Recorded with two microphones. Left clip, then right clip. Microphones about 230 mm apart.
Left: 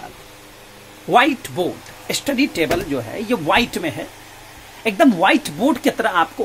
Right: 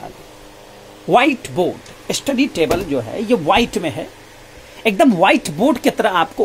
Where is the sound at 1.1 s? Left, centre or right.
Centre.